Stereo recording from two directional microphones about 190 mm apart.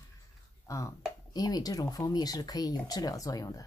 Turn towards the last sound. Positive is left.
turn(degrees=20)  # may be behind; listen again after turning